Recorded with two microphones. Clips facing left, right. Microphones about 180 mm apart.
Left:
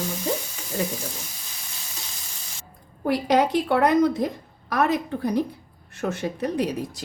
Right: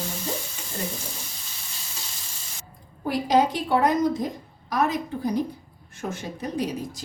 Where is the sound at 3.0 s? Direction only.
65° left (ahead or behind).